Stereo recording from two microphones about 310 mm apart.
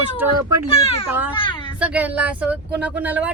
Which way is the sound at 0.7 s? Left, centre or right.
Centre.